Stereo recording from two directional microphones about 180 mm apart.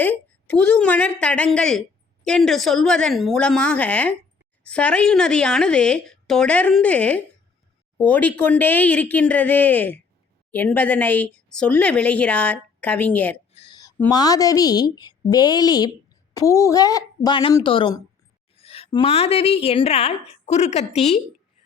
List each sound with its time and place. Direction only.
0.0 s speech: 10° left (ahead or behind)
13.5 s a sound: 35° left (ahead or behind)
14.1 s a woman's voice: 20° left (ahead or behind); by 21.2 s 35° left (ahead or behind)